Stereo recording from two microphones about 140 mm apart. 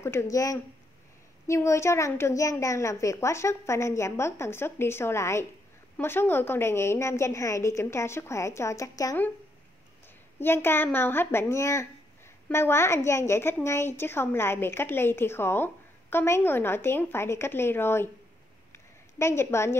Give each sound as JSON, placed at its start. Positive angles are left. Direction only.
{"t": 0.0, "sound": "a woman's voice", "side_deg": 20}
{"t": 10.4, "sound": "a woman's voice", "side_deg": 15}
{"t": 18.7, "sound": "a sound", "side_deg": 20}